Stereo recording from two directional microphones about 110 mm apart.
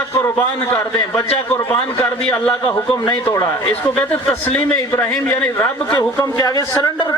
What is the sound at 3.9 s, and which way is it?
A man's voice, 10° left (ahead or behind).